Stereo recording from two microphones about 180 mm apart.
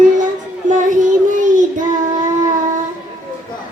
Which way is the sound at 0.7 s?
45° right (ahead or behind).